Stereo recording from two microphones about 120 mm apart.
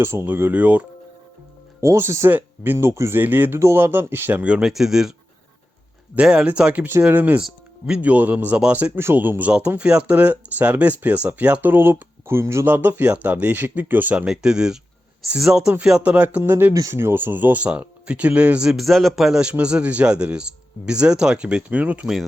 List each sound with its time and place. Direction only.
0.0 s speech: 20° right (ahead or behind)
1.8 s speech: 25° right (ahead or behind); by 5.1 s 5° right (ahead or behind)
6.1 s speech: 10° right (ahead or behind)